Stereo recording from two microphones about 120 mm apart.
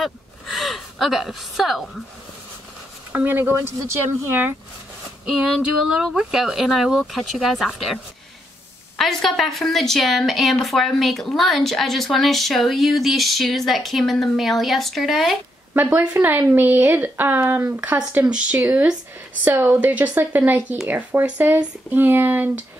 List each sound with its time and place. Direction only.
0.0 s a woman's voice: centre (ahead or behind)
3.1 s speech: 15° right (ahead or behind)
5.2 s a woman's voice: 5° right (ahead or behind)
15.7 s speech: 15° right (ahead or behind)